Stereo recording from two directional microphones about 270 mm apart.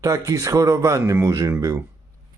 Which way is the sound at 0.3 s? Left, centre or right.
Centre.